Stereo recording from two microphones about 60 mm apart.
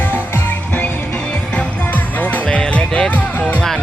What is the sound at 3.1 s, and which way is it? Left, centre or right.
Music, left.